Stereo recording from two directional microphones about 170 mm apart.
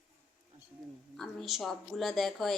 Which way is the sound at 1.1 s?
Centre (ahead or behind).